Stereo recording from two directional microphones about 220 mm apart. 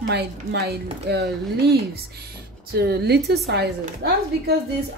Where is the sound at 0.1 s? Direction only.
50° right (ahead or behind).